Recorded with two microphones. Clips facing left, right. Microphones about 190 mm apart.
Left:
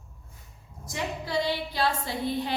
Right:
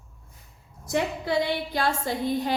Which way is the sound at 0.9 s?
55° right (ahead or behind).